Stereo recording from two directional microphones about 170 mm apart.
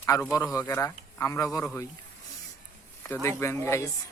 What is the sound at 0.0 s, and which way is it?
A man's voice, 15° left (ahead or behind).